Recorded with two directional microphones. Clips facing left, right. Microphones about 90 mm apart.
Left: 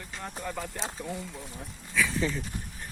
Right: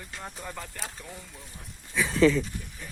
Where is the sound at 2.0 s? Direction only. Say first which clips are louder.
Left 1 dB; 20° right (ahead or behind).